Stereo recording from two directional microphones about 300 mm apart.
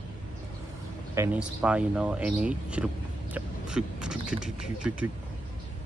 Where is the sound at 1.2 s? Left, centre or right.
Centre.